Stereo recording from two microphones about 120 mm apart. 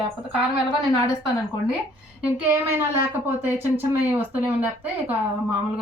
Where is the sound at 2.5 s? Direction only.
20° right (ahead or behind).